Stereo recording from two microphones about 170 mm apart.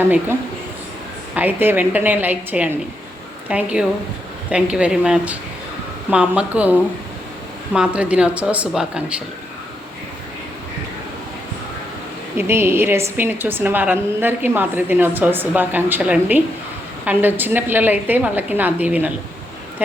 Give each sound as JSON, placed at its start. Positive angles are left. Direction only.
{"t": 0.0, "sound": "a woman's voice", "side_deg": -15}
{"t": 1.4, "sound": "a woman's voice", "side_deg": -10}
{"t": 12.4, "sound": "a woman's voice", "side_deg": -15}